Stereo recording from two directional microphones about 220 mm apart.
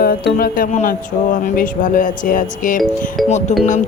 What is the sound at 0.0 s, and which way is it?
Speech, 40° left (ahead or behind).